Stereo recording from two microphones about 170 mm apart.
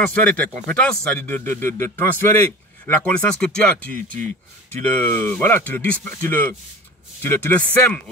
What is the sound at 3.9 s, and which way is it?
Speech, 50° right (ahead or behind).